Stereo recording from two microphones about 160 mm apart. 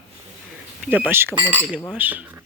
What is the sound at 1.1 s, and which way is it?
Speech, 15° right (ahead or behind).